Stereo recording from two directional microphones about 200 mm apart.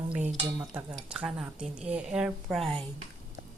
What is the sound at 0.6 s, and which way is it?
Speech, 5° right (ahead or behind).